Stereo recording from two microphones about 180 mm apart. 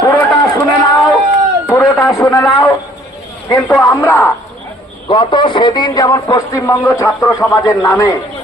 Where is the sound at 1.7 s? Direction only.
15° left (ahead or behind).